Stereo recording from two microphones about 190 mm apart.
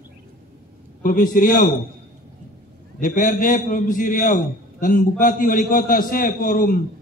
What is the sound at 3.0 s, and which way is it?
A man's voice, 45° left (ahead or behind).